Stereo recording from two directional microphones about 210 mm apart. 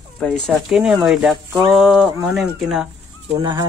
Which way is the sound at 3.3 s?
20° right (ahead or behind).